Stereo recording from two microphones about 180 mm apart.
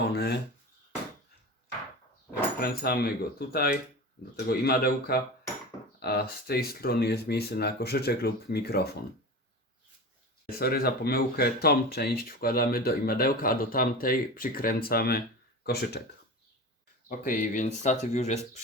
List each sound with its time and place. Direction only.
0.1 s speech: 65° left (ahead or behind)
2.6 s speech: 55° left (ahead or behind)
10.6 s speech: 60° left (ahead or behind)
17.1 s speech: 50° left (ahead or behind)